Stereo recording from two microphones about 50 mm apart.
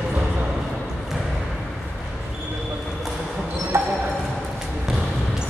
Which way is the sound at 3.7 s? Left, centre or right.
Right.